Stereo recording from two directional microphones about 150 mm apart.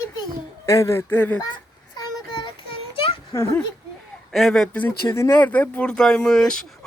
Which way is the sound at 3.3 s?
20° left (ahead or behind).